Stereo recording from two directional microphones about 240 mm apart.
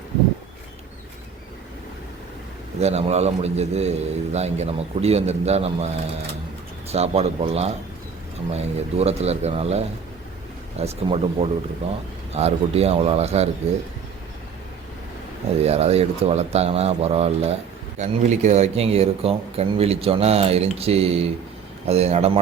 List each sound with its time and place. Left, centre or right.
2.8 s speech: right
15.6 s speech: right